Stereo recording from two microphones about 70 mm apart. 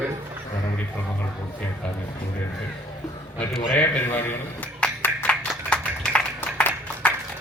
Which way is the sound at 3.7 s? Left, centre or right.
Left.